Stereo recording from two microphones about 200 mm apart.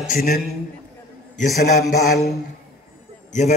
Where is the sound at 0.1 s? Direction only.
45° left (ahead or behind).